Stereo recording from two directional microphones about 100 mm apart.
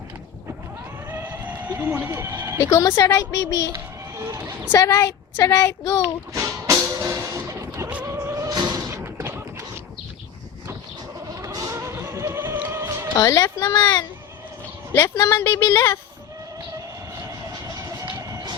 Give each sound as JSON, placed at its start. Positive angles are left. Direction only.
{"t": 1.1, "sound": "a sound", "side_deg": -15}
{"t": 2.6, "sound": "a woman's voice", "side_deg": 30}
{"t": 4.2, "sound": "speech", "side_deg": -30}
{"t": 4.7, "sound": "a woman's voice", "side_deg": 35}
{"t": 6.3, "sound": "music", "side_deg": -30}
{"t": 8.9, "sound": "a sound", "side_deg": -25}
{"t": 11.3, "sound": "music", "side_deg": -35}
{"t": 13.1, "sound": "a woman's voice", "side_deg": 35}
{"t": 14.9, "sound": "a woman's voice", "side_deg": 25}
{"t": 17.2, "sound": "vehicle", "side_deg": -35}